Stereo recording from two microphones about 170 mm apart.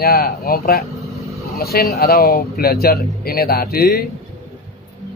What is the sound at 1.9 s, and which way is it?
Speech, 65° left (ahead or behind).